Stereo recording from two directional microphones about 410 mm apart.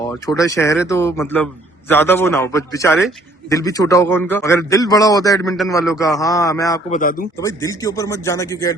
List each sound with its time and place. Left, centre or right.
0.0 s a man's voice: centre
7.0 s speech: centre
7.3 s a man's voice: centre